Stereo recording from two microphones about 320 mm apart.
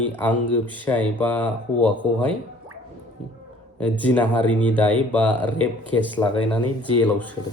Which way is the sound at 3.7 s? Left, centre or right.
Centre.